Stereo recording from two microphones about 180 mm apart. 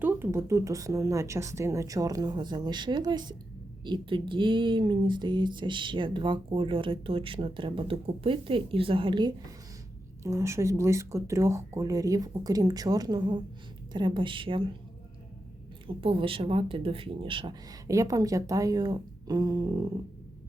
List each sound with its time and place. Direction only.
0.0 s speech: 15° right (ahead or behind); by 14.8 s 30° right (ahead or behind)
15.9 s speech: 30° right (ahead or behind)